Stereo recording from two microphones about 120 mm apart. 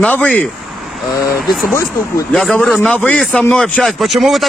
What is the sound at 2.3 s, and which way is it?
Speech, 5° left (ahead or behind).